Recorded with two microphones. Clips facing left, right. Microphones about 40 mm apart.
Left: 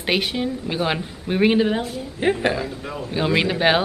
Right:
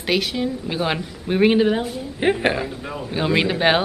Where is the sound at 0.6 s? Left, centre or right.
Centre.